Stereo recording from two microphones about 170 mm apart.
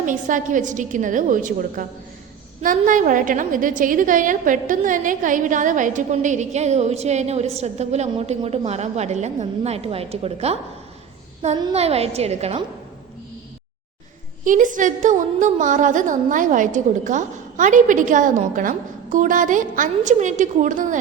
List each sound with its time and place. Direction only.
0.0 s a woman's voice: 50° right (ahead or behind)
11.7 s a woman's voice: 35° right (ahead or behind)
14.4 s a woman's voice: 50° right (ahead or behind)